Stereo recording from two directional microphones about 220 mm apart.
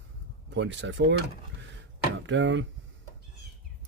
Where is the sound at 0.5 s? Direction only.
55° right (ahead or behind).